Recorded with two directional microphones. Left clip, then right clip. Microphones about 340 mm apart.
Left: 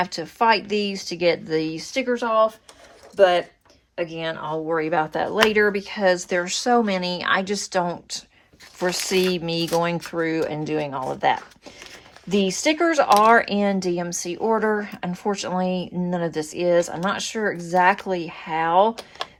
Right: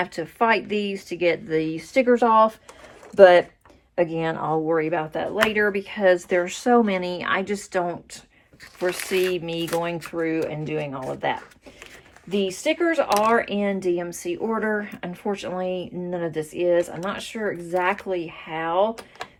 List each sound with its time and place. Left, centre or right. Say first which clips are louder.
0.0 s speech: left 2 dB; centre
2.0 s speech: right 2 dB; centre
4.6 s speech: left 1 dB; centre